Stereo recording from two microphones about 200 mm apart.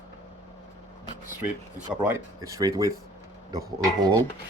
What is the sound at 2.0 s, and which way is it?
Speech, 10° right (ahead or behind).